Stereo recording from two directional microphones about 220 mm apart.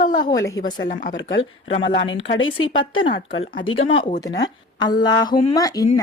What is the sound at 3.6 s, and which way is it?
Speech, 65° left (ahead or behind).